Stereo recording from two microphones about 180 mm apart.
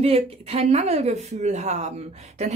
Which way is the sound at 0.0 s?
35° right (ahead or behind).